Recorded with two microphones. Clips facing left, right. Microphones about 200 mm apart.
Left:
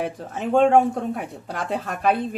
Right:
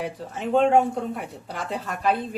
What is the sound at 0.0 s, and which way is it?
Speech, 50° left (ahead or behind).